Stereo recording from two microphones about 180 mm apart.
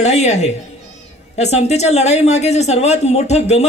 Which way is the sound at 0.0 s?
40° left (ahead or behind).